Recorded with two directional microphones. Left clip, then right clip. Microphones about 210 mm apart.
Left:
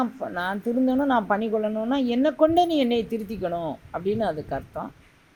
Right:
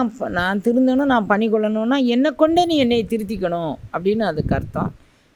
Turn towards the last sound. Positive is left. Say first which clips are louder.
# right 7 dB
turn(degrees=-60)  # may be behind; listen again after turning